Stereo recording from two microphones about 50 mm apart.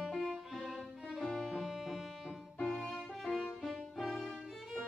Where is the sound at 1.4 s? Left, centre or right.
Centre.